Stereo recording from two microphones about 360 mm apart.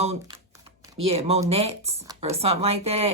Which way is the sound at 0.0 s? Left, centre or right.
Centre.